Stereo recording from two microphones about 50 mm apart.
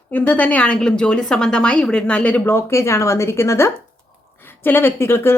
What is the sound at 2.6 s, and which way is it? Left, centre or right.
A woman's voice, left.